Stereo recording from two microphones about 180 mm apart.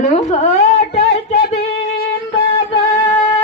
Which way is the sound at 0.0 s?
40° left (ahead or behind).